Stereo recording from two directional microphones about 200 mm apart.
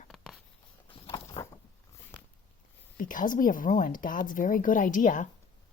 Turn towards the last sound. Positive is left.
turn(degrees=40)  # may be behind; listen again after turning